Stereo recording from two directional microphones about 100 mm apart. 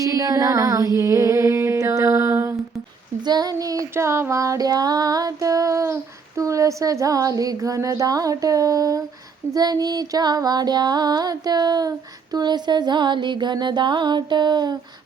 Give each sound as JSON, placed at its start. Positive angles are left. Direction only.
{"t": 0.0, "sound": "female singing", "side_deg": -35}
{"t": 0.9, "sound": "a sound", "side_deg": -30}
{"t": 3.2, "sound": "child singing", "side_deg": -40}
{"t": 9.6, "sound": "music", "side_deg": -40}